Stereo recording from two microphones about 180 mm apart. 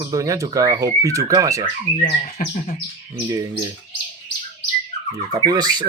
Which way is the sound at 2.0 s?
45° left (ahead or behind).